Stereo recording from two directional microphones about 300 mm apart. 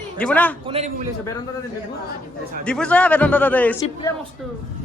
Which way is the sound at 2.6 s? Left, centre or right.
Centre.